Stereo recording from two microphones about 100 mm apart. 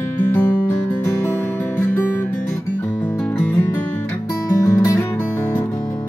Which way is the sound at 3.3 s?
15° left (ahead or behind).